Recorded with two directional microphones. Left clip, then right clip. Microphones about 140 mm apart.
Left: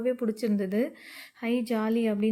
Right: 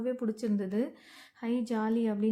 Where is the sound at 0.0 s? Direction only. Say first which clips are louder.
Left 5 dB; 15° left (ahead or behind).